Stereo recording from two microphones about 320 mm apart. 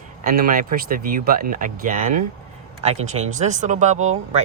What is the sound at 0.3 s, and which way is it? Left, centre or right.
Speech, right.